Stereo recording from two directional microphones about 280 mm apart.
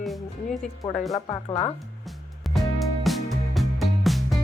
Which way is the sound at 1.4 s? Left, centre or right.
Left.